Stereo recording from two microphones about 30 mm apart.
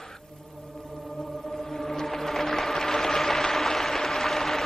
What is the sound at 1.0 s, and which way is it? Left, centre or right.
Whale vocalization, centre.